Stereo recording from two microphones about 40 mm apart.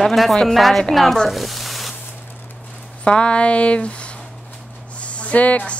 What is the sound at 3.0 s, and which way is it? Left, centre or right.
A woman's voice, left.